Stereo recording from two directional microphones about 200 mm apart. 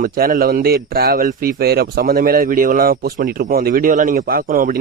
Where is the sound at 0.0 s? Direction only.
45° right (ahead or behind).